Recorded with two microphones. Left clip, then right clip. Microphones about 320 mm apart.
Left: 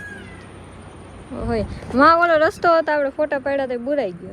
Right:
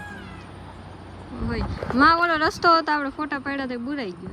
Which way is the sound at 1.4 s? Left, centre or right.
Centre.